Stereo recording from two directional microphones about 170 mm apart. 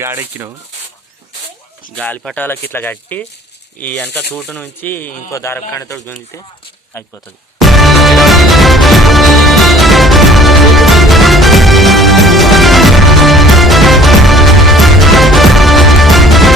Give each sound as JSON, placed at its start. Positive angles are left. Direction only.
{"t": 0.0, "sound": "speech", "side_deg": -15}
{"t": 2.0, "sound": "speech", "side_deg": 5}
{"t": 7.6, "sound": "music", "side_deg": 0}